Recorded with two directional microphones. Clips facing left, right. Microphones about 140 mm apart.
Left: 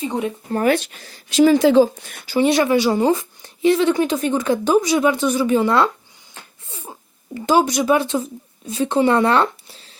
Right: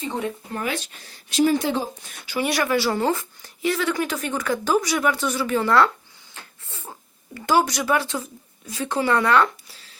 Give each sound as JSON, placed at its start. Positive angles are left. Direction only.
{"t": 0.1, "sound": "speech", "side_deg": 15}
{"t": 0.5, "sound": "speech", "side_deg": 50}
{"t": 1.0, "sound": "speech", "side_deg": 90}
{"t": 2.4, "sound": "speech", "side_deg": 20}
{"t": 6.7, "sound": "a sound", "side_deg": 20}
{"t": 7.3, "sound": "speech", "side_deg": 20}